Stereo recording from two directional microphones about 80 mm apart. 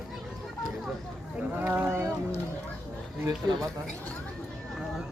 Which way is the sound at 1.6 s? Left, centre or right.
Right.